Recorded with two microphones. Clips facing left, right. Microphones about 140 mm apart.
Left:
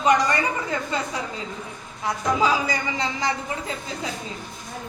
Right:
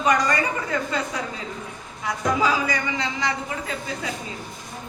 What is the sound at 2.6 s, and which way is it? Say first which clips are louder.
Speech: even; 35° left (ahead or behind).